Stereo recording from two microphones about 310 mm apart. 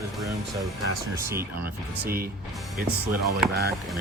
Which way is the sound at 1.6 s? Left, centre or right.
Right.